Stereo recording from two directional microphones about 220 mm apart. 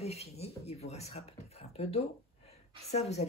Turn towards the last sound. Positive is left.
turn(degrees=30)  # may be behind; listen again after turning